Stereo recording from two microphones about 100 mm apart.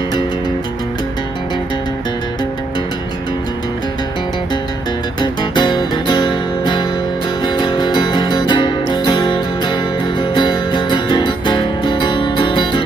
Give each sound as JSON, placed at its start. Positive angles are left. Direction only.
{"t": 5.2, "sound": "music", "side_deg": 50}